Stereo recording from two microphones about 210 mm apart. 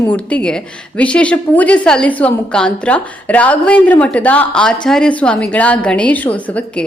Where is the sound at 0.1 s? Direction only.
5° left (ahead or behind).